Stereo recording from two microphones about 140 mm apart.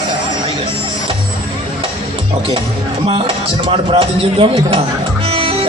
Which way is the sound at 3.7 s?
40° right (ahead or behind).